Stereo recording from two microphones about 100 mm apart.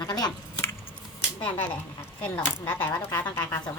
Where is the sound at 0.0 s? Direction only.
40° left (ahead or behind).